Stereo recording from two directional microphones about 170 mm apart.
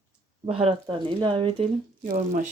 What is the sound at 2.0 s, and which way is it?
Speech, 50° right (ahead or behind).